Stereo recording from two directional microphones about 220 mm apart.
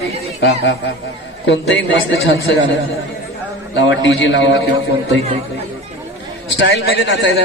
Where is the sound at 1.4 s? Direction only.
55° left (ahead or behind).